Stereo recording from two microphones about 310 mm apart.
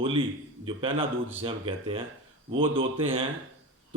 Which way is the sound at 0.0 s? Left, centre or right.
Centre.